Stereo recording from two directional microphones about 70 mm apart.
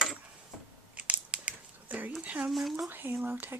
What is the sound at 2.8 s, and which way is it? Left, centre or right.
Speech, right.